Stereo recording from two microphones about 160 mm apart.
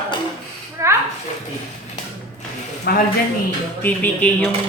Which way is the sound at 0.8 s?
20° right (ahead or behind).